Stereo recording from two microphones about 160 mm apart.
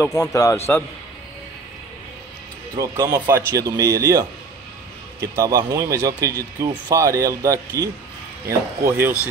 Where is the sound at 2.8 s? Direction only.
20° right (ahead or behind).